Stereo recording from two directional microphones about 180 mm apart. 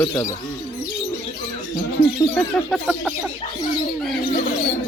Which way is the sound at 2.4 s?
Centre (ahead or behind).